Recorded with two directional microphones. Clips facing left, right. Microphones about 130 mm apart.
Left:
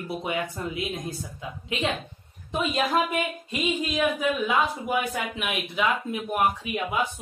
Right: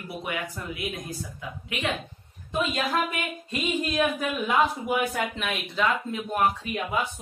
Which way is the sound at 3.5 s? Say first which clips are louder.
Even; centre (ahead or behind).